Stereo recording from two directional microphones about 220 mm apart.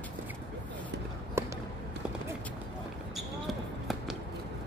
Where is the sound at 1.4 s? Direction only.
10° right (ahead or behind).